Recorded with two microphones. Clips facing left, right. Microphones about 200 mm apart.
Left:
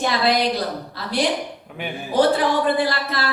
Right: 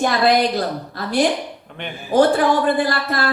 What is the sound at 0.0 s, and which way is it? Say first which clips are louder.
A woman's voice: right 3 dB; 50° right (ahead or behind).